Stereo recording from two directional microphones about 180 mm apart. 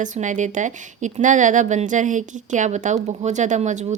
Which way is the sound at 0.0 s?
45° right (ahead or behind).